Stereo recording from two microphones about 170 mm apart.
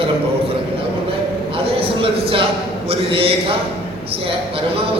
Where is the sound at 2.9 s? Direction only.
35° right (ahead or behind).